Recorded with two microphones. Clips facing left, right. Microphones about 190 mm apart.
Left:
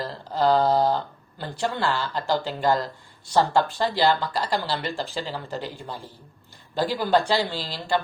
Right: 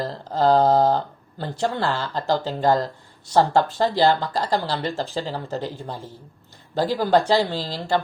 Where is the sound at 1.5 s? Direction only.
20° right (ahead or behind).